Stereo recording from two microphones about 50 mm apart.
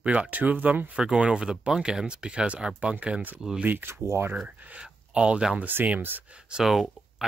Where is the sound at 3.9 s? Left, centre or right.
Right.